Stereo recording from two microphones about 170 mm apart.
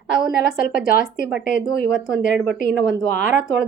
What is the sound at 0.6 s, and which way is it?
Speech, 55° left (ahead or behind).